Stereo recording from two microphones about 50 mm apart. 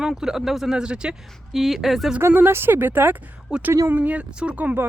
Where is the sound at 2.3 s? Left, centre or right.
Right.